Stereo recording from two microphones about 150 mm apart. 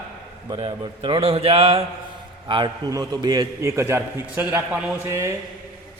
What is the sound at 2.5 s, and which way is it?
A man's voice, 30° right (ahead or behind).